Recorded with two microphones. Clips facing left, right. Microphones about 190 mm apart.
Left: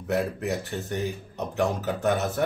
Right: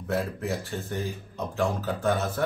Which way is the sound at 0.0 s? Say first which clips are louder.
Left 2 dB; 20° left (ahead or behind).